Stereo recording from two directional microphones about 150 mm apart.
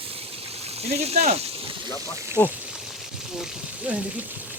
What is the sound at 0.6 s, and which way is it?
Speech, 45° right (ahead or behind).